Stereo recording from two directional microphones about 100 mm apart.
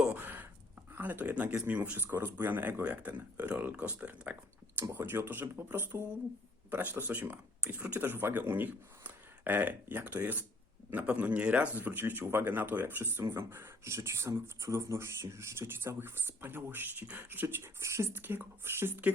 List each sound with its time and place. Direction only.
0.2 s writing: 20° right (ahead or behind)
0.9 s speech: 20° right (ahead or behind)
4.8 s speech: 20° right (ahead or behind)